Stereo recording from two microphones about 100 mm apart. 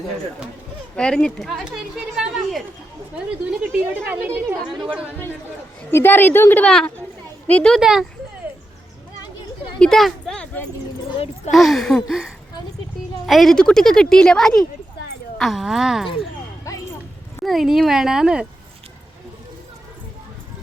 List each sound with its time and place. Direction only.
0.9 s speech: 10° left (ahead or behind)
1.6 s a woman's voice: 5° right (ahead or behind)
3.6 s a woman's voice: 15° right (ahead or behind)
5.9 s a woman's voice: 20° left (ahead or behind)
6.7 s speech: 5° left (ahead or behind)
7.7 s speech: 5° right (ahead or behind)
9.7 s a sound: 5° left (ahead or behind)
11.5 s speech: centre (ahead or behind)
16.7 s clip-clop: 35° left (ahead or behind)
17.4 s speech: centre (ahead or behind)